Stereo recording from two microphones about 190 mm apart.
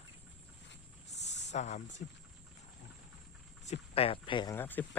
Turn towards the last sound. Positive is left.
turn(degrees=10)  # may be behind; listen again after turning